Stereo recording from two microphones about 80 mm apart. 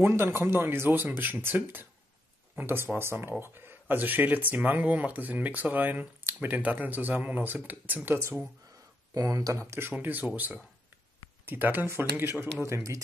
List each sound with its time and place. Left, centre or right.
0.0 s speech: right
9.1 s speech: right
12.6 s speech: right